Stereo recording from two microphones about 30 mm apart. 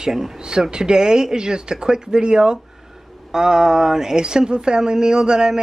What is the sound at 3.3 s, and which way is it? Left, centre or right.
Speech, centre.